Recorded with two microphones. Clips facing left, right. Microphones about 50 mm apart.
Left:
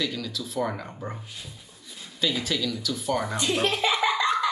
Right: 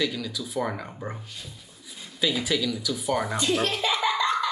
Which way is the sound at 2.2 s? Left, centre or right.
Centre.